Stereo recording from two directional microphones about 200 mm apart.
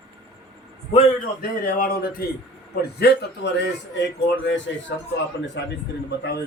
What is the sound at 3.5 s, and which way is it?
Speech, 55° left (ahead or behind).